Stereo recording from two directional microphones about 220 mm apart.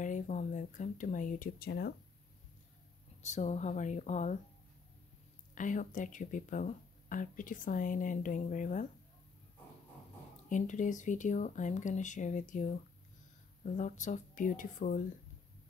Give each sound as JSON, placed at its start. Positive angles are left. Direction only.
{"t": 0.0, "sound": "speech", "side_deg": 35}
{"t": 3.2, "sound": "speech", "side_deg": 30}
{"t": 5.5, "sound": "speech", "side_deg": 35}
{"t": 10.5, "sound": "speech", "side_deg": 35}
{"t": 13.7, "sound": "speech", "side_deg": 35}